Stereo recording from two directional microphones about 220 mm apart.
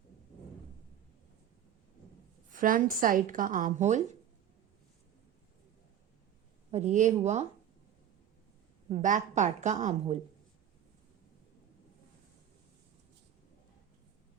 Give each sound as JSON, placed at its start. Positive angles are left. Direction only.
{"t": 2.5, "sound": "a woman's voice", "side_deg": -40}
{"t": 6.7, "sound": "a woman's voice", "side_deg": -30}
{"t": 8.9, "sound": "a woman's voice", "side_deg": -35}